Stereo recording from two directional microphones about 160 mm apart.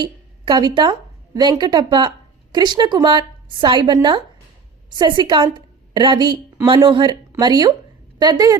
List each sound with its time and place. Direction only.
0.0 s a woman's voice: 30° right (ahead or behind)